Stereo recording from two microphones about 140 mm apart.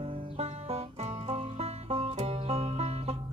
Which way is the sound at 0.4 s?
45° right (ahead or behind).